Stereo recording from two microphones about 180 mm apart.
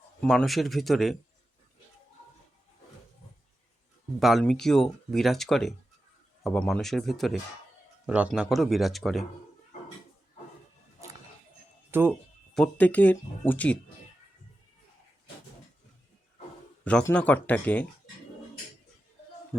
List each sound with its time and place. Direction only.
0.2 s speech: centre (ahead or behind)
4.2 s speech: centre (ahead or behind)
11.9 s speech: 10° right (ahead or behind)
12.5 s speech: 5° left (ahead or behind)
17.0 s speech: 10° left (ahead or behind)